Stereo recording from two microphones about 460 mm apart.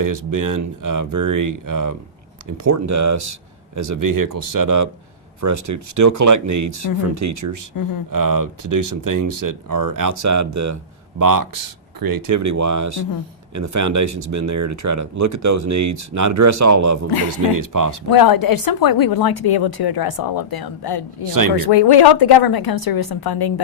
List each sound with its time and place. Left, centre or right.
0.3 s speech: right
7.7 s speech: left
8.1 s speech: right
18.1 s speech: left